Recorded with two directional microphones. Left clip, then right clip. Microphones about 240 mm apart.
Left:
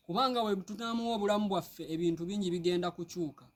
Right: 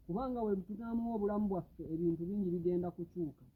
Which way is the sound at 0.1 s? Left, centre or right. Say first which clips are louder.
Left 7 dB; left.